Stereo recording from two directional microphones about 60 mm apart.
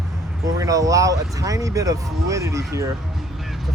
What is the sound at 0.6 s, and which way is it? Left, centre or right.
Speech, right.